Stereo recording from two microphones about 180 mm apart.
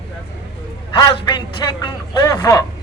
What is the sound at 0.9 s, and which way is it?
Speech, 25° left (ahead or behind).